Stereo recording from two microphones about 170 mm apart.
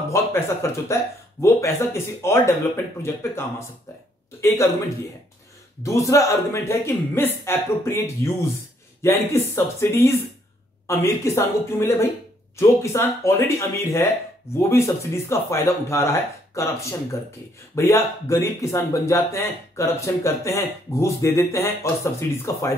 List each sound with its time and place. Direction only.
0.1 s speech: 15° left (ahead or behind)